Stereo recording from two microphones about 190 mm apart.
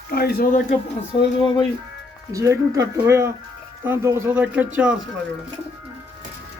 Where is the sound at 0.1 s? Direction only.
55° left (ahead or behind).